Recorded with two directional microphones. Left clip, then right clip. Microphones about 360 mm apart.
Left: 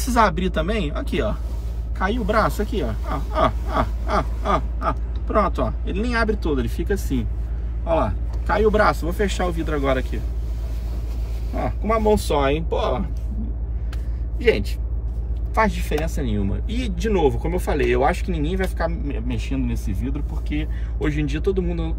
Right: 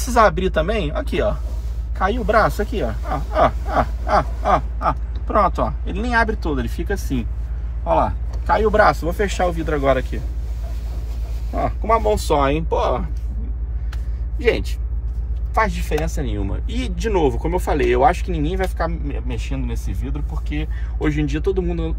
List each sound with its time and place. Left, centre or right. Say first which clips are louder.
0.0 s speech: right 3 dB; centre
11.5 s speech: right 4 dB; centre
14.4 s speech: even; centre